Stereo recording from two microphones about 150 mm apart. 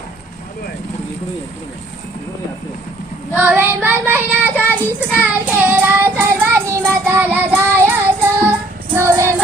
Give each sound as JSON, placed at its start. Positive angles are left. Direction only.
{"t": 3.3, "sound": "child singing", "side_deg": -10}
{"t": 9.0, "sound": "music", "side_deg": -15}